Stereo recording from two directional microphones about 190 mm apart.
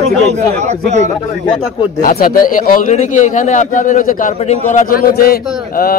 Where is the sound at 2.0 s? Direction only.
45° left (ahead or behind).